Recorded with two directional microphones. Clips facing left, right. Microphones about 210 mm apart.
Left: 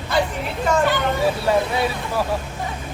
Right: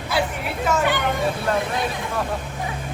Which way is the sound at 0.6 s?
10° right (ahead or behind).